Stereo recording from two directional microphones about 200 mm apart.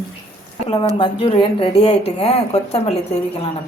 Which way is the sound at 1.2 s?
30° left (ahead or behind).